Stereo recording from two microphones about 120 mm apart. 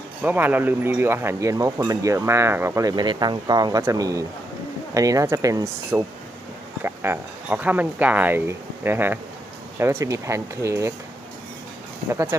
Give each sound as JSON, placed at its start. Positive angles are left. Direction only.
{"t": 0.2, "sound": "speech", "side_deg": -15}
{"t": 12.0, "sound": "speech", "side_deg": -20}